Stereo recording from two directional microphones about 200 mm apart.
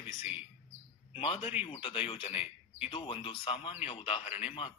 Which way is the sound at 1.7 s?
25° left (ahead or behind).